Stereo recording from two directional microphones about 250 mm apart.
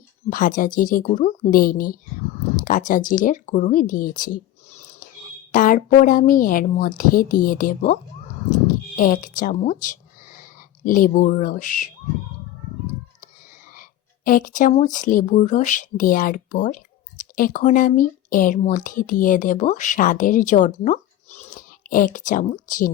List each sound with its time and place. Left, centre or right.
0.3 s a woman's voice: left
5.5 s a woman's voice: left
8.4 s a sound: left
10.8 s a woman's voice: left
14.3 s speech: left